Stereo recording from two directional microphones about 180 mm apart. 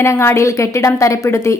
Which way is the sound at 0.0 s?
15° left (ahead or behind).